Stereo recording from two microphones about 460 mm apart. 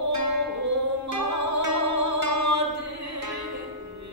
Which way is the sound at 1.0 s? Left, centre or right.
Right.